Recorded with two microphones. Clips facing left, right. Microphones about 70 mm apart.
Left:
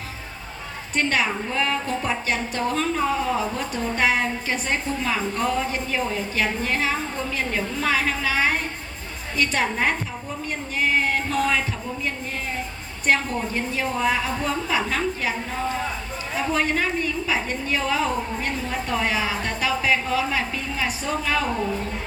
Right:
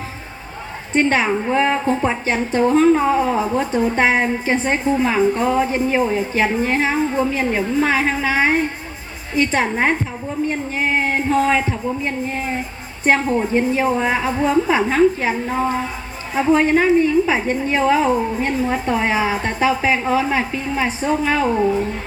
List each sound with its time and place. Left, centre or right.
0.9 s a woman's voice: right